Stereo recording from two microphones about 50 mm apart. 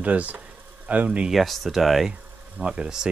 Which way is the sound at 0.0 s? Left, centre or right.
Right.